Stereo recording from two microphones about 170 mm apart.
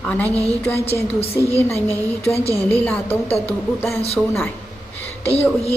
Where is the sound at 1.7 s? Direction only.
15° left (ahead or behind).